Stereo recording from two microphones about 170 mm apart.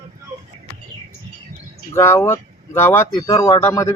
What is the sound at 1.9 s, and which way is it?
Speech, 15° left (ahead or behind).